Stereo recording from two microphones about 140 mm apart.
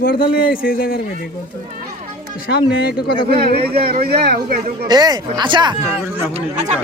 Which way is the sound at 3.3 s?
90° right.